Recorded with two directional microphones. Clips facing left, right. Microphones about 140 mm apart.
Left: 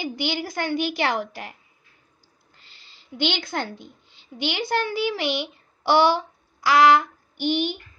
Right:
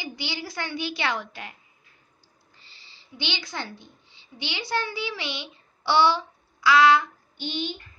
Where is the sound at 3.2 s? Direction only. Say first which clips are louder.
Left 6 dB; 55° left (ahead or behind).